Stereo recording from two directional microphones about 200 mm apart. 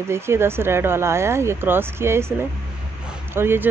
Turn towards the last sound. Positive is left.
turn(degrees=-10)  # may be behind; listen again after turning